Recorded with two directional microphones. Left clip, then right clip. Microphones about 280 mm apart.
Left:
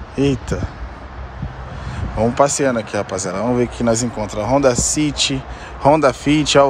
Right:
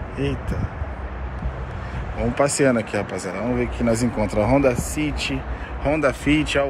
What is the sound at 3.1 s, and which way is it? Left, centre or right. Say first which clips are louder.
Speech: left 5 dB; left.